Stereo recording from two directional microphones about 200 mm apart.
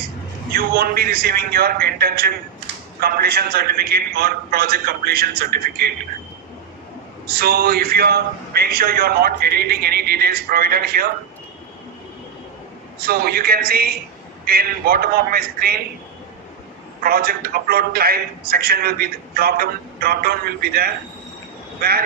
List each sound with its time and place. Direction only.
0.5 s a man's voice: 50° right (ahead or behind)
7.3 s a man's voice: 50° right (ahead or behind)
13.0 s a man's voice: 50° right (ahead or behind)
17.0 s a man's voice: 50° right (ahead or behind)